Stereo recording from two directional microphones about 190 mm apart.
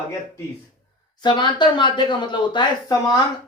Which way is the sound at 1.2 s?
25° left (ahead or behind).